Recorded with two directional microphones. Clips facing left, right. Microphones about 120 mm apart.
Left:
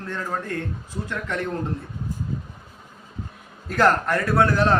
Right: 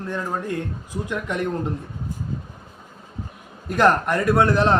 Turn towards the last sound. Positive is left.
turn(degrees=-20)  # may be behind; listen again after turning